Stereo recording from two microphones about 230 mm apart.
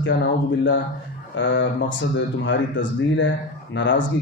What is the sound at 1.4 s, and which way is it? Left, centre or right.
Speech, left.